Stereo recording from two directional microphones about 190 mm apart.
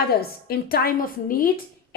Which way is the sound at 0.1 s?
55° left (ahead or behind).